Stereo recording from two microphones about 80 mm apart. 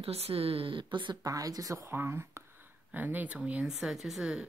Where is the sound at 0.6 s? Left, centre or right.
Right.